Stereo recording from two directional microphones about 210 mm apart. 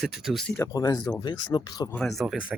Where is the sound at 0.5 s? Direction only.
15° left (ahead or behind).